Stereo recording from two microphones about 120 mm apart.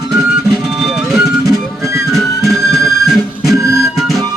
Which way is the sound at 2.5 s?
Centre (ahead or behind).